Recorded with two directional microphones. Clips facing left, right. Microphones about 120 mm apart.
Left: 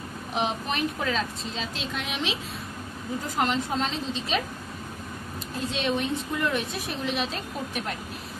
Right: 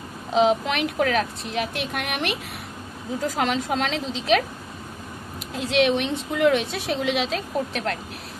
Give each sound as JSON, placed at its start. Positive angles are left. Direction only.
{"t": 0.3, "sound": "a woman's voice", "side_deg": -90}
{"t": 3.3, "sound": "a woman's voice", "side_deg": -90}
{"t": 5.4, "sound": "a woman's voice", "side_deg": -90}